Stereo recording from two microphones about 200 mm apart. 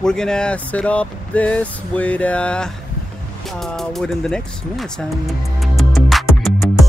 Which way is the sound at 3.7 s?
Centre (ahead or behind).